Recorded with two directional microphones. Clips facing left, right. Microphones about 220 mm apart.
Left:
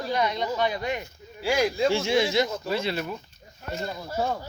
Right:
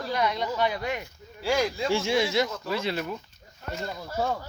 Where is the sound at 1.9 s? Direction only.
10° right (ahead or behind).